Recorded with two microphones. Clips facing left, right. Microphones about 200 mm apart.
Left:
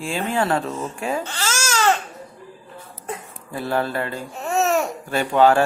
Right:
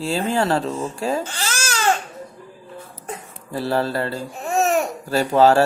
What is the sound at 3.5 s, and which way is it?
Speech, 35° right (ahead or behind).